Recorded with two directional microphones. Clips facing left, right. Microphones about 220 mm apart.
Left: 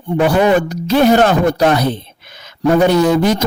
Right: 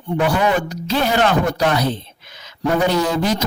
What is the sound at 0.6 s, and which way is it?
Speech, 45° left (ahead or behind).